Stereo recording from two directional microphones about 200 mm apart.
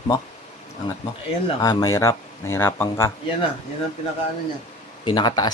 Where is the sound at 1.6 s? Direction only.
20° left (ahead or behind).